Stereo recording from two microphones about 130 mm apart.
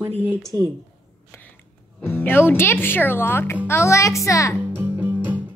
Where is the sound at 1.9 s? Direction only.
15° left (ahead or behind).